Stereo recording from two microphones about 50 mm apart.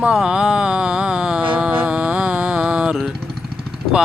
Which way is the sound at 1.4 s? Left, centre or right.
Right.